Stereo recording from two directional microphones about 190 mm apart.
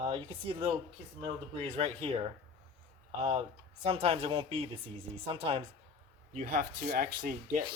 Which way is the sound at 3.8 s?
30° right (ahead or behind).